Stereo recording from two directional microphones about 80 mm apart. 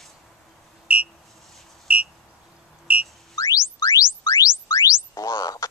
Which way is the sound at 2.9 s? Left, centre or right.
Right.